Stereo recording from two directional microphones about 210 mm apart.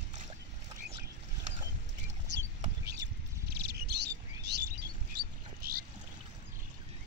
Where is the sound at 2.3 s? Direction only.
50° right (ahead or behind).